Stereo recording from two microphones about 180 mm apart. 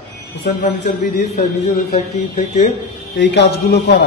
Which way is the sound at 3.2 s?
70° left (ahead or behind).